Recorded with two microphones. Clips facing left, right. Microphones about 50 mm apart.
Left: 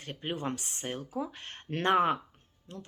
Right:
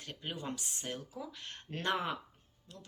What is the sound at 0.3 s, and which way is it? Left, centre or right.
Speech, left.